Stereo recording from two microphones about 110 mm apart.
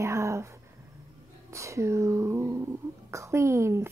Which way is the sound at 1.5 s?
25° right (ahead or behind).